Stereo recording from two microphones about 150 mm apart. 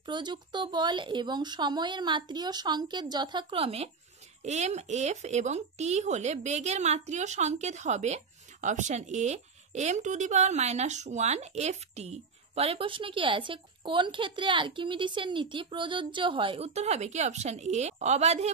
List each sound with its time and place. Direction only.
0.0 s a woman's voice: 30° right (ahead or behind); by 18.5 s 45° right (ahead or behind)